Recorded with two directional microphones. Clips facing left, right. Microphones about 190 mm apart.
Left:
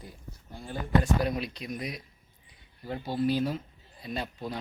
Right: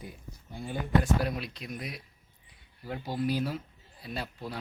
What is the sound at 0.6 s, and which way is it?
Speech, 5° right (ahead or behind).